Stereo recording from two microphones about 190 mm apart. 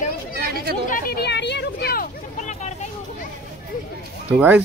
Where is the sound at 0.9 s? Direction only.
50° left (ahead or behind).